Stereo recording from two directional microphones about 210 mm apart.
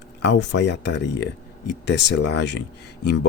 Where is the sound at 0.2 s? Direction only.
55° left (ahead or behind).